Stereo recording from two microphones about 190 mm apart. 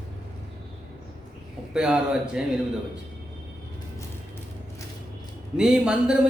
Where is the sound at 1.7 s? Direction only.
5° right (ahead or behind).